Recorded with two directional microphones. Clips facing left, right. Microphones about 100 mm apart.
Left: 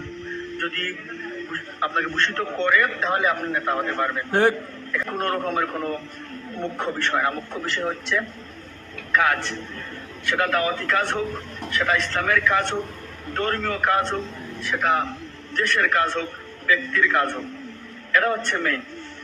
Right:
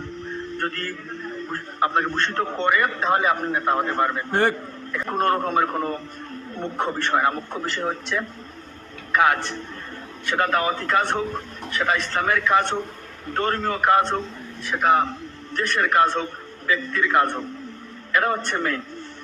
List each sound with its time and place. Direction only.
0.6 s a man's voice: 20° right (ahead or behind)
4.3 s a man's voice: centre (ahead or behind)
4.9 s a man's voice: 20° right (ahead or behind)